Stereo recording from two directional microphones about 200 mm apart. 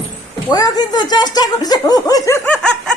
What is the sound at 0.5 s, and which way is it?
Speech, 20° left (ahead or behind).